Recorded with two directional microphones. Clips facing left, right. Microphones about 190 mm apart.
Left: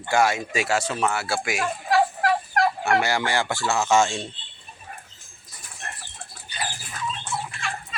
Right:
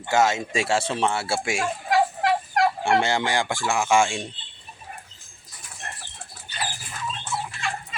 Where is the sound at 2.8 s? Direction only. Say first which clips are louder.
Right 1 dB; 25° right (ahead or behind).